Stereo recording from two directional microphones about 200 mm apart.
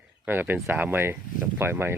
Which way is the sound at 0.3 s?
10° right (ahead or behind).